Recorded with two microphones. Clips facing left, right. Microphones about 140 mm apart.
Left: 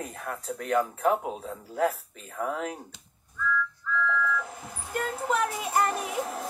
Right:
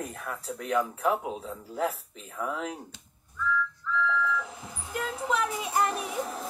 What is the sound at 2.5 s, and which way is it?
Speech, 50° left (ahead or behind).